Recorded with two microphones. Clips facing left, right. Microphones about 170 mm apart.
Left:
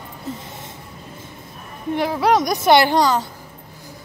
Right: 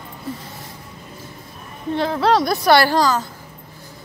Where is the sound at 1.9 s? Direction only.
15° left (ahead or behind).